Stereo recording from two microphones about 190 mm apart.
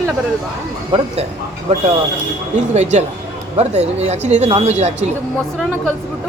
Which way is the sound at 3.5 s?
35° right (ahead or behind).